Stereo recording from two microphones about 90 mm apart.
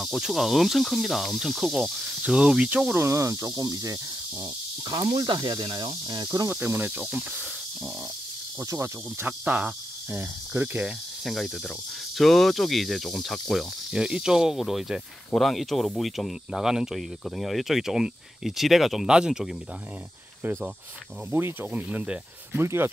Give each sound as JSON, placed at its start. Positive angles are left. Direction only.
{"t": 0.0, "sound": "speech", "side_deg": 0}
{"t": 2.9, "sound": "speech", "side_deg": -30}
{"t": 5.0, "sound": "speech", "side_deg": -55}
{"t": 6.2, "sound": "speech", "side_deg": -40}
{"t": 8.5, "sound": "speech", "side_deg": -30}
{"t": 11.2, "sound": "speech", "side_deg": 0}
{"t": 21.3, "sound": "speech", "side_deg": -25}
{"t": 21.8, "sound": "speech", "side_deg": -10}
{"t": 22.5, "sound": "speech", "side_deg": -25}